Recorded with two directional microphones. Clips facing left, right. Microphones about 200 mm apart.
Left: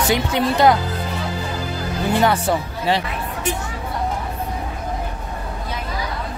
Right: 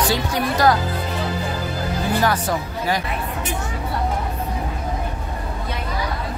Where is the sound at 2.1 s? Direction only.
25° left (ahead or behind).